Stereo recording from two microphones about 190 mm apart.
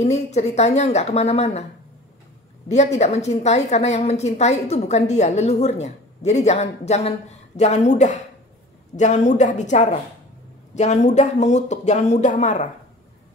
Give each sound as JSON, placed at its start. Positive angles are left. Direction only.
{"t": 0.0, "sound": "a woman's voice", "side_deg": 35}
{"t": 2.7, "sound": "a woman's voice", "side_deg": 35}